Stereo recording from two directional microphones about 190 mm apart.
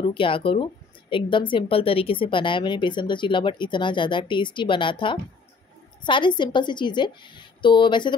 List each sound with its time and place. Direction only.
0.0 s speech: 25° left (ahead or behind)